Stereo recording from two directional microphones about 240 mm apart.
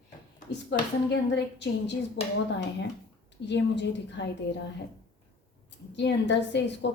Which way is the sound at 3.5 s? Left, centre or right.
Left.